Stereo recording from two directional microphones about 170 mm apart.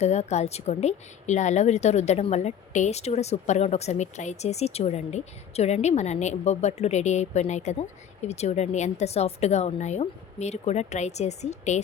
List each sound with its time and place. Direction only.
0.0 s speech: 40° left (ahead or behind)